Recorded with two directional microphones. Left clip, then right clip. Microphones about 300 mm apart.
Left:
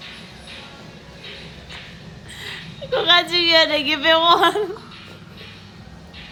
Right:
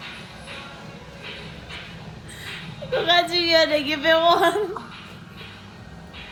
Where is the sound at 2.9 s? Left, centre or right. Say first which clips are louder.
Left 3 dB; centre.